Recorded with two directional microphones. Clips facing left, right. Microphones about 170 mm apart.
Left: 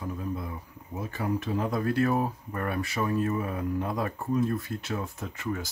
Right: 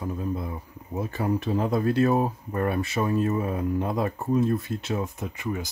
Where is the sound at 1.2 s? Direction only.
30° right (ahead or behind).